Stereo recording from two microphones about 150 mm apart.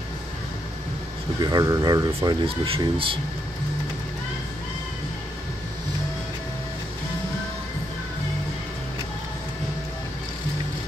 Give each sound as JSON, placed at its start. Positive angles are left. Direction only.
{"t": 1.4, "sound": "speech", "side_deg": -25}
{"t": 2.2, "sound": "speech", "side_deg": -40}